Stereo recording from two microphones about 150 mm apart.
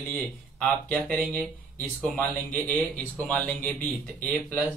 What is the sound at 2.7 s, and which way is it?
Speech, 10° left (ahead or behind).